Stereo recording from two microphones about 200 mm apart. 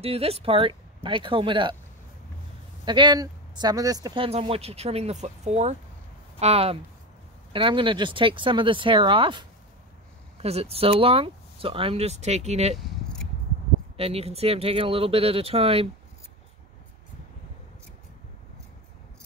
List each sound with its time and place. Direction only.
0.0 s speech: 30° right (ahead or behind)
2.8 s speech: 25° right (ahead or behind)
12.7 s keys jangling: centre (ahead or behind)
13.9 s speech: 30° right (ahead or behind)